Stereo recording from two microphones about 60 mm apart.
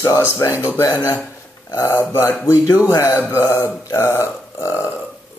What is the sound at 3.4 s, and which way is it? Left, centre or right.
Speech, left.